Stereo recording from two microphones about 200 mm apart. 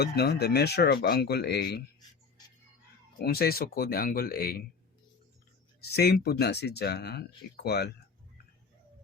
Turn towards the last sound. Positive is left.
turn(degrees=55)  # may be behind; listen again after turning